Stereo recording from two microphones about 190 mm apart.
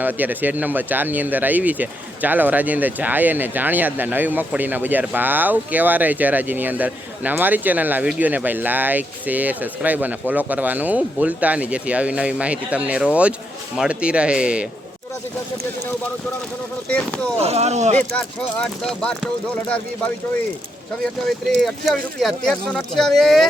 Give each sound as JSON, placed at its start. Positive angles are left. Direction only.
{"t": 0.0, "sound": "speech", "side_deg": -10}
{"t": 16.9, "sound": "speech", "side_deg": 5}
{"t": 17.3, "sound": "speech", "side_deg": -35}
{"t": 18.2, "sound": "speech", "side_deg": 5}
{"t": 21.0, "sound": "speech", "side_deg": 0}